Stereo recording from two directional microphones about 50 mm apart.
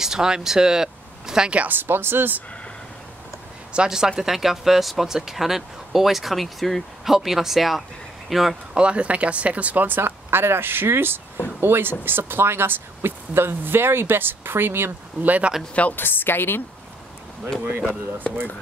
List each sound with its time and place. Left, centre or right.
0.0 s speech: centre
1.7 s speech: right
3.7 s speech: centre
8.7 s speech: right
15.2 s speech: right
15.7 s a woman's voice: left
16.0 s a woman's voice: left
17.6 s speech: right